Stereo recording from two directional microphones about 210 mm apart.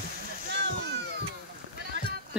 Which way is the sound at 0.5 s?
55° right (ahead or behind).